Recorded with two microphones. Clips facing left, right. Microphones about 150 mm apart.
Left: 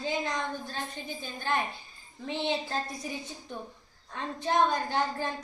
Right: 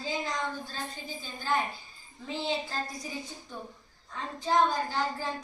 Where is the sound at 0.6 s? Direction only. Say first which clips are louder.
Left 2 dB; 60° left (ahead or behind).